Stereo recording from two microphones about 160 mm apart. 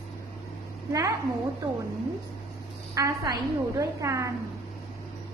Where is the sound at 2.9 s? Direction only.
25° right (ahead or behind).